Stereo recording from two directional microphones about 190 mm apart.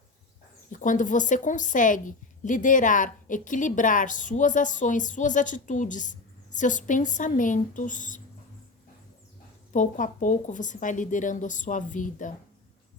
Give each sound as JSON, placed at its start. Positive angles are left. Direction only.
{"t": 0.7, "sound": "a woman's voice", "side_deg": 45}
{"t": 9.7, "sound": "speech", "side_deg": 40}